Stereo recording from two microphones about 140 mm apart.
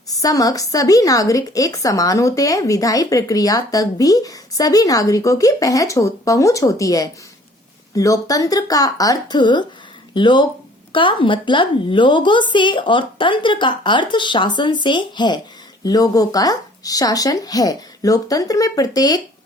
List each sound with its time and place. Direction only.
0.2 s a woman's voice: 25° left (ahead or behind)